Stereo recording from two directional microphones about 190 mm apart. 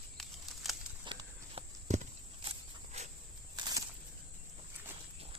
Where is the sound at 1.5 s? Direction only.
35° right (ahead or behind).